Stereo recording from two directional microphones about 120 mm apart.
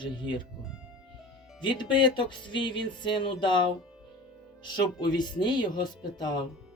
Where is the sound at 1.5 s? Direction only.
40° left (ahead or behind).